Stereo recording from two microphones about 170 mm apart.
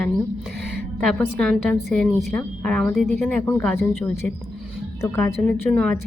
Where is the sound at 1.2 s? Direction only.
5° left (ahead or behind).